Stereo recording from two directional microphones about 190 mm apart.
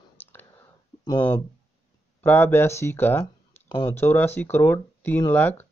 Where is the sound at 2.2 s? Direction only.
10° left (ahead or behind).